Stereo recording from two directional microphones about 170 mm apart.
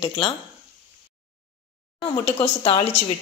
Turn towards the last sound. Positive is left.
turn(degrees=35)  # may be behind; listen again after turning